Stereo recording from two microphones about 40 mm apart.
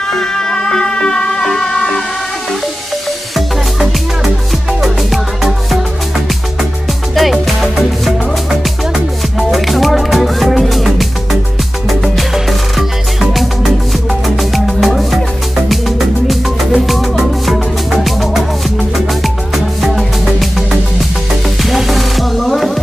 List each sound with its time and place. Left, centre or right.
0.1 s music: centre
4.2 s music: centre
7.2 s music: centre
21.6 s music: centre